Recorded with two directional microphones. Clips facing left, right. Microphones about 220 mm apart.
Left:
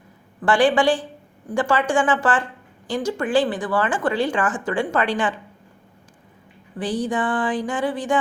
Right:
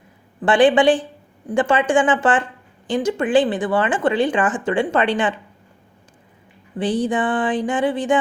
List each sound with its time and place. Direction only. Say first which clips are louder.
0.4 s speech: right 4 dB; 20° right (ahead or behind)
6.7 s speech: right 3 dB; 25° right (ahead or behind)